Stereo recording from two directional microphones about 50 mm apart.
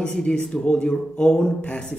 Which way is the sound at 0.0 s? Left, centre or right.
Centre.